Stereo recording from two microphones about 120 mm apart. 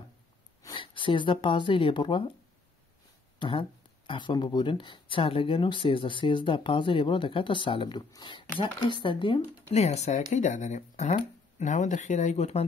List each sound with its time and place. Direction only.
0.7 s speech: 45° left (ahead or behind)
3.3 s speech: 45° left (ahead or behind)
9.7 s speech: 65° left (ahead or behind)
11.6 s speech: 90° left; by 12.6 s 65° left (ahead or behind)